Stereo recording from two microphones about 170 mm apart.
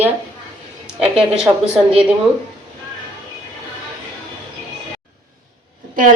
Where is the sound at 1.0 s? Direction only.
5° right (ahead or behind).